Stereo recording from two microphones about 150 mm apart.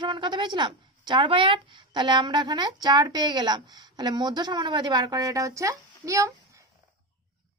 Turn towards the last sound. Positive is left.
turn(degrees=-20)  # may be behind; listen again after turning